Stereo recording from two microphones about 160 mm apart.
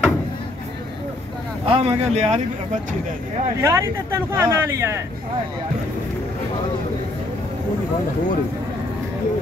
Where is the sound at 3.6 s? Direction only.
20° right (ahead or behind).